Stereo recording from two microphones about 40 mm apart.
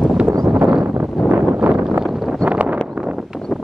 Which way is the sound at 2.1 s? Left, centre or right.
Centre.